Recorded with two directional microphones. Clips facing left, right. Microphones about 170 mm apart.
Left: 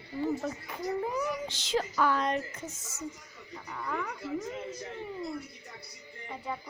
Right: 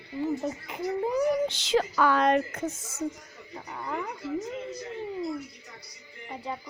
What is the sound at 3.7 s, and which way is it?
Speech, 25° right (ahead or behind).